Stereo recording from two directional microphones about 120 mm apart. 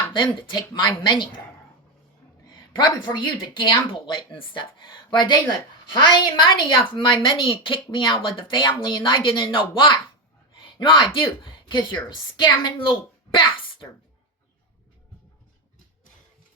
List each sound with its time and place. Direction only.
0.1 s speech: 40° left (ahead or behind)
2.7 s a woman's voice: 40° left (ahead or behind)